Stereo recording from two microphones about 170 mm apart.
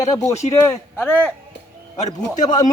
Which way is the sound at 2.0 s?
45° left (ahead or behind).